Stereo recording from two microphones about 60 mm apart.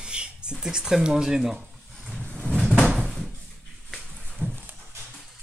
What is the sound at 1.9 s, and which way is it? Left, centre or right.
Vehicle, centre.